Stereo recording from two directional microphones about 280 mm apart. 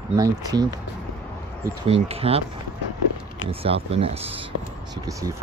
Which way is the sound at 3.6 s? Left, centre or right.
Right.